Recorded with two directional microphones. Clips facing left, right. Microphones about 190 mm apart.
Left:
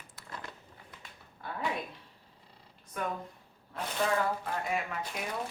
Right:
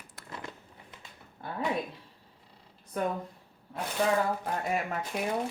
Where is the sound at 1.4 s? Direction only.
30° right (ahead or behind).